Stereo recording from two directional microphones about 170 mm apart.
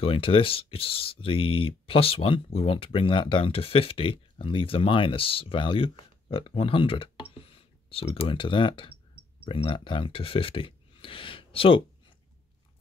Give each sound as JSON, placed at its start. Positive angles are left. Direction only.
{"t": 0.0, "sound": "speech", "side_deg": 30}